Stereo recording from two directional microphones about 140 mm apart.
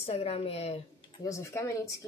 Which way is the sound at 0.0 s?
45° left (ahead or behind).